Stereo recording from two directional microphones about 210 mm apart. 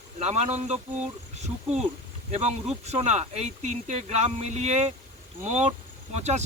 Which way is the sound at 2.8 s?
30° right (ahead or behind).